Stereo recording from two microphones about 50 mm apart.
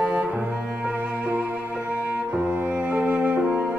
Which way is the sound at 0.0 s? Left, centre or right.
Centre.